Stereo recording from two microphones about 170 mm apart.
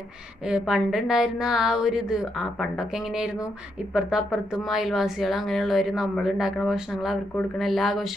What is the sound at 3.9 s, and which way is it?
A woman's voice, 5° right (ahead or behind).